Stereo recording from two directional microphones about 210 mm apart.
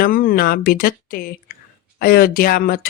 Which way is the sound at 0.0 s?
40° left (ahead or behind).